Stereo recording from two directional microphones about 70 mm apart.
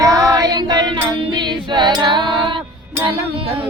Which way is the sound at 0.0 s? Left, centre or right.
Right.